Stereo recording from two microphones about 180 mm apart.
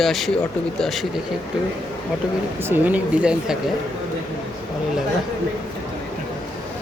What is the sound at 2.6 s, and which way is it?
Speech, 10° right (ahead or behind).